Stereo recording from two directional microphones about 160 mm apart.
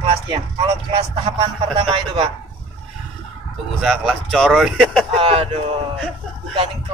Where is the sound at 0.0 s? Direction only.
35° right (ahead or behind).